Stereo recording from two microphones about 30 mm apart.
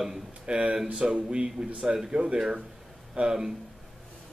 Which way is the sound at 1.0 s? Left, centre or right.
Right.